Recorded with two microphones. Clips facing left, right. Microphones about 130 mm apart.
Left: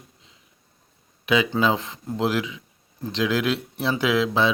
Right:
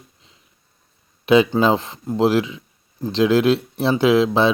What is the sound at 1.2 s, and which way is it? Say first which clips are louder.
Speech: right 6 dB; 30° right (ahead or behind).